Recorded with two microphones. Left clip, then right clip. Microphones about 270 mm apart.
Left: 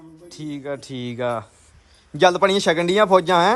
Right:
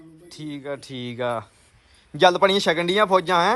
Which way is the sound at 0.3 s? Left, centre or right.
Centre.